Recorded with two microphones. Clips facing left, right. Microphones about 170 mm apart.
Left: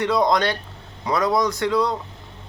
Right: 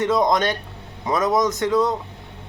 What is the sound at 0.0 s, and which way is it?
Speech, 20° right (ahead or behind).